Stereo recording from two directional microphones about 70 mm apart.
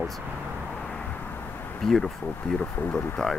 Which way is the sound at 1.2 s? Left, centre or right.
Left.